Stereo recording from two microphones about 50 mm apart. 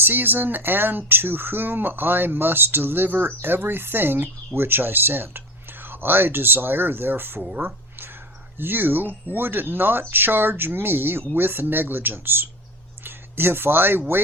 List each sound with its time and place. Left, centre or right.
0.0 s speech: right
7.6 s a sound: right
8.5 s speech: right